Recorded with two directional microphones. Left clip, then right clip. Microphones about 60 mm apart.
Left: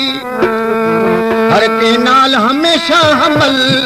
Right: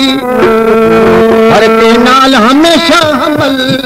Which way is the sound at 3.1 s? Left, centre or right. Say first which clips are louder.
Right 1 dB; left.